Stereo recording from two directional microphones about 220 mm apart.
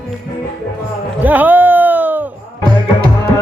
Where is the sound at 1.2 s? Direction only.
10° right (ahead or behind).